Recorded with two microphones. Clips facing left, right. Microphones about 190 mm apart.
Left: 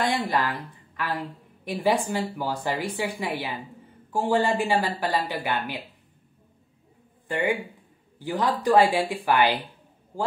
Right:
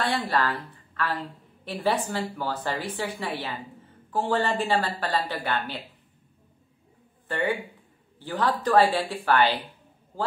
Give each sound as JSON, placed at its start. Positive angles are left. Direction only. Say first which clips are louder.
{"t": 0.0, "sound": "a woman's voice", "louder": "left 1 dB", "side_deg": 15}
{"t": 7.2, "sound": "a woman's voice", "louder": "left 2 dB", "side_deg": 15}